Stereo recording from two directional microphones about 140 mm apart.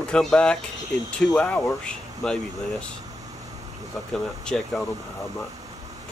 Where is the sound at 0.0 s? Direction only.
5° left (ahead or behind).